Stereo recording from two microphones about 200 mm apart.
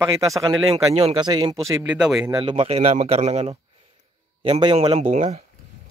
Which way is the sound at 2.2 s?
20° right (ahead or behind).